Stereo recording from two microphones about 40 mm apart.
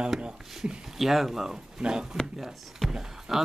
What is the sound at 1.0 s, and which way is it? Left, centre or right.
Speech, centre.